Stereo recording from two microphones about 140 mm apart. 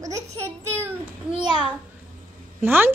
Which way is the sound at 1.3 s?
35° right (ahead or behind).